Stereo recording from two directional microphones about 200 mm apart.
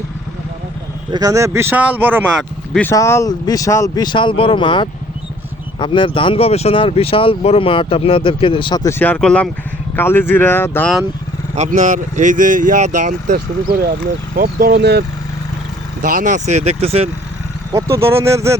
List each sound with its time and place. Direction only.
1.1 s speech: 15° right (ahead or behind)
2.7 s speech: 10° left (ahead or behind)
11.5 s speech: 40° right (ahead or behind); by 15.0 s 55° right (ahead or behind)
16.0 s speech: 45° right (ahead or behind)
17.7 s speech: 15° right (ahead or behind)